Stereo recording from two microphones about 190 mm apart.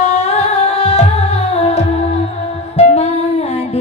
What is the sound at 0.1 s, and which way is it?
Music, 35° left (ahead or behind).